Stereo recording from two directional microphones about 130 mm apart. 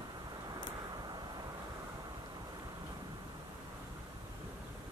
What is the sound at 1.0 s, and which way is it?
Vehicle, 35° right (ahead or behind).